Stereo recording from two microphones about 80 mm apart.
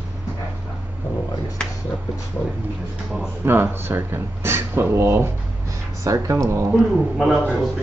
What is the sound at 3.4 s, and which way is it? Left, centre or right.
Speech, right.